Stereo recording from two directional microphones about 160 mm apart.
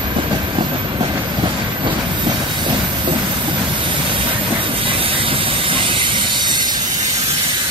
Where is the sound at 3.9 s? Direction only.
35° right (ahead or behind).